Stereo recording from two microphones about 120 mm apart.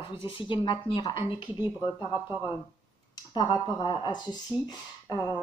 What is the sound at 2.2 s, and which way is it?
Speech, 15° right (ahead or behind).